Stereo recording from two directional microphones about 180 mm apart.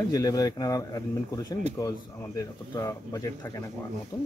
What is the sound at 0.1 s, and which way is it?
A man's voice, 20° left (ahead or behind).